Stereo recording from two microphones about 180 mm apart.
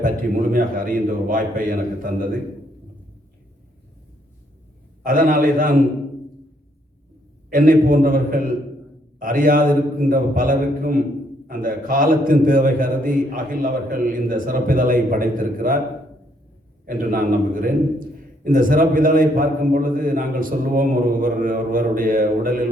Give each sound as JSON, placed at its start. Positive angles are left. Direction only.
{"t": 0.0, "sound": "a man's voice", "side_deg": -50}
{"t": 5.0, "sound": "a man's voice", "side_deg": -50}
{"t": 7.5, "sound": "a man's voice", "side_deg": -50}
{"t": 16.8, "sound": "a man's voice", "side_deg": -50}